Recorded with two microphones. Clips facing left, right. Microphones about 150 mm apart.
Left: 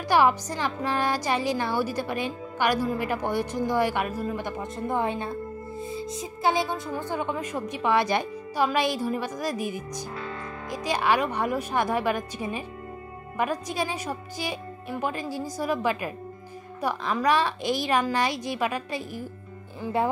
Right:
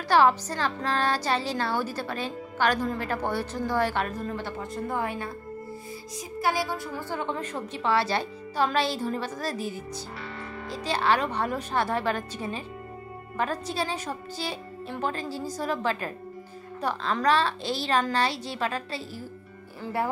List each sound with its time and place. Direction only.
0.1 s speech: 15° left (ahead or behind)